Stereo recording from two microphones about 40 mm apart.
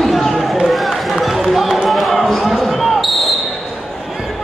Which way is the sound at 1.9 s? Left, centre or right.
Centre.